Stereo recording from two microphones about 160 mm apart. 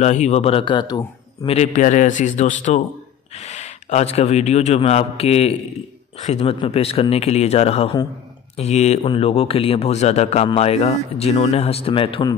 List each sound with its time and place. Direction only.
0.0 s a man's voice: 45° left (ahead or behind); by 1.5 s 25° left (ahead or behind)
1.5 s a man's voice: 45° left (ahead or behind); by 12.4 s 30° left (ahead or behind)